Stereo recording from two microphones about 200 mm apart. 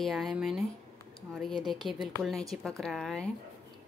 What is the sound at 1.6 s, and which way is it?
Speech, centre (ahead or behind).